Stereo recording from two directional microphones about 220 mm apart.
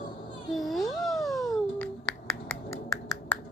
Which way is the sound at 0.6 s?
Centre (ahead or behind).